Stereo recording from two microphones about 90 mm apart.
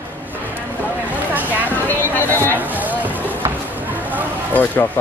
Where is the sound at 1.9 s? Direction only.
20° left (ahead or behind).